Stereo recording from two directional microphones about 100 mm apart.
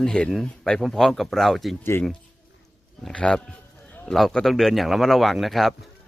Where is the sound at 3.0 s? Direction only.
5° left (ahead or behind).